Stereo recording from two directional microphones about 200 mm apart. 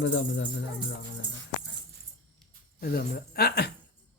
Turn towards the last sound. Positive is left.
turn(degrees=50)  # may be behind; listen again after turning